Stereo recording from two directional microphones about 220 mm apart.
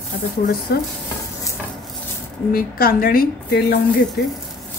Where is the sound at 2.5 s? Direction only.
40° left (ahead or behind).